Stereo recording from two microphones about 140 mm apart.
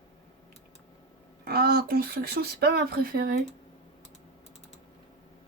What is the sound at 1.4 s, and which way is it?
Speech, 90° right.